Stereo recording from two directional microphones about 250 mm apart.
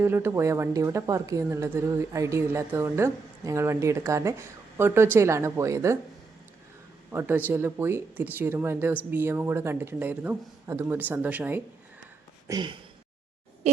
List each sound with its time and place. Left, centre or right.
0.0 s a woman's voice: centre
7.1 s a woman's voice: centre
12.5 s a woman's voice: centre